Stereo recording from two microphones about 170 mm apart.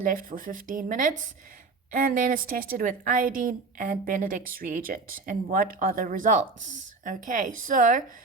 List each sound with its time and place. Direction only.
0.0 s a woman's voice: 55° right (ahead or behind)